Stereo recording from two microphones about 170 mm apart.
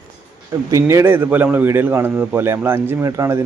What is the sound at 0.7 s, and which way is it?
A man's voice, 15° right (ahead or behind).